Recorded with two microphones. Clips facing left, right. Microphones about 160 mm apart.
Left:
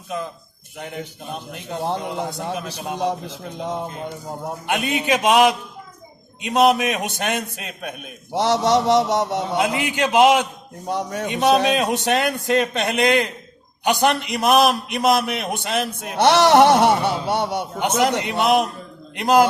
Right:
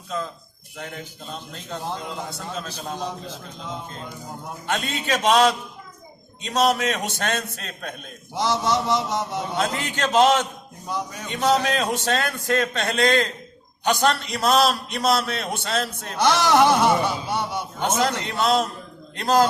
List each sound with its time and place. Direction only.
0.8 s a man's voice: 15° left (ahead or behind)
1.8 s a man's voice: 65° left (ahead or behind)
2.7 s a man's voice: 15° left (ahead or behind)
3.0 s a man's voice: 65° left (ahead or behind)
4.6 s a man's voice: 15° left (ahead or behind)
8.3 s a man's voice: 65° left (ahead or behind)
9.6 s a man's voice: 15° left (ahead or behind)
10.8 s a man's voice: 65° left (ahead or behind)
11.3 s a man's voice: 20° left (ahead or behind)
16.1 s a man's voice: 70° left (ahead or behind)
18.2 s a man's voice: 15° left (ahead or behind)